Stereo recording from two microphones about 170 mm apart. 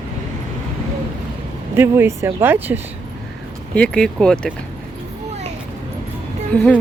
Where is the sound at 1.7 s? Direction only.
15° right (ahead or behind).